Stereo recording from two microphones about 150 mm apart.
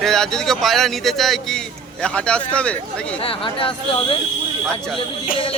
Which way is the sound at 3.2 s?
35° left (ahead or behind).